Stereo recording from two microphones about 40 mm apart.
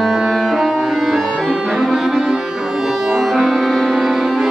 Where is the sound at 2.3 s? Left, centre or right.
Centre.